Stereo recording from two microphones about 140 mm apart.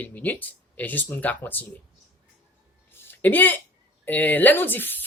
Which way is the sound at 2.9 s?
15° left (ahead or behind).